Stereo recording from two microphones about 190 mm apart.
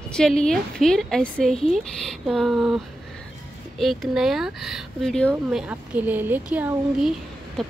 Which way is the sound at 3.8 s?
Centre (ahead or behind).